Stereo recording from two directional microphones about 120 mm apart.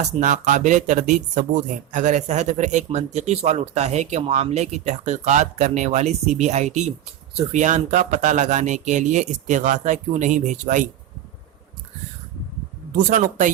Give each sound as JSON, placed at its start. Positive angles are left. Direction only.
{"t": 0.0, "sound": "speech", "side_deg": -90}
{"t": 4.2, "sound": "speech", "side_deg": -60}
{"t": 7.5, "sound": "speech", "side_deg": -85}
{"t": 13.1, "sound": "speech", "side_deg": -90}